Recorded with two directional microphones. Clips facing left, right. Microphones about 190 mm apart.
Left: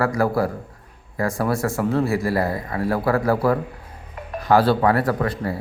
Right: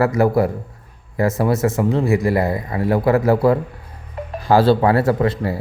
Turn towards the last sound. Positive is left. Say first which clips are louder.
# right 5 dB
turn(degrees=-25)  # may be behind; listen again after turning